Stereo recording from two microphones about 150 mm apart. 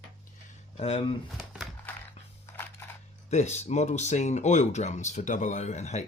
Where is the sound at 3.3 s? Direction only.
50° left (ahead or behind).